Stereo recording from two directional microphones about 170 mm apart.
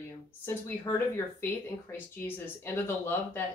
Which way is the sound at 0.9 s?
20° left (ahead or behind).